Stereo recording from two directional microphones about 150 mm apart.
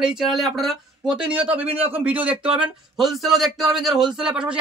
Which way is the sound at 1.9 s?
10° right (ahead or behind).